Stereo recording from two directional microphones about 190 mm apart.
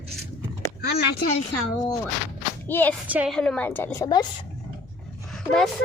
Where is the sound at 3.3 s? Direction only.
5° left (ahead or behind).